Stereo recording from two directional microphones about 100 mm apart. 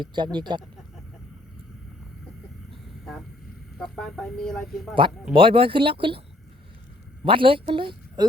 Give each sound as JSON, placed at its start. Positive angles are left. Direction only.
{"t": 0.0, "sound": "speech", "side_deg": -50}
{"t": 3.8, "sound": "speech", "side_deg": 5}
{"t": 5.3, "sound": "speech", "side_deg": -60}
{"t": 7.3, "sound": "speech", "side_deg": -60}